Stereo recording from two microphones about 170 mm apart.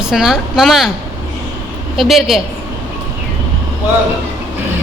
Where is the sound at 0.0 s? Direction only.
5° right (ahead or behind).